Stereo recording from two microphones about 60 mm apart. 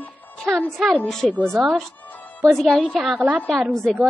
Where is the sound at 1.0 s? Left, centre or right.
Centre.